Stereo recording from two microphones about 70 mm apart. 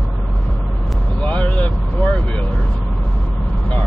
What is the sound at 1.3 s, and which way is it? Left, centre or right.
Vehicle, left.